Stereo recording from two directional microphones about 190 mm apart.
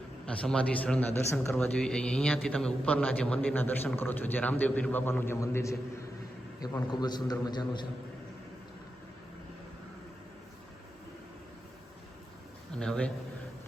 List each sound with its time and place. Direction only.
0.3 s a man's voice: 5° left (ahead or behind); by 7.9 s 25° left (ahead or behind)
12.7 s a man's voice: 5° left (ahead or behind)